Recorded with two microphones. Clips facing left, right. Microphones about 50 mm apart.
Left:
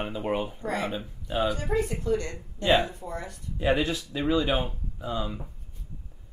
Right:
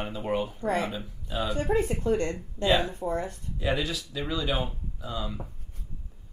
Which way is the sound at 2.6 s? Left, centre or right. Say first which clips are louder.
Left 1 dB; left.